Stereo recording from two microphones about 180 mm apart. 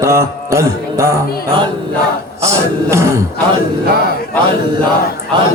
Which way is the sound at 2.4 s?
15° right (ahead or behind).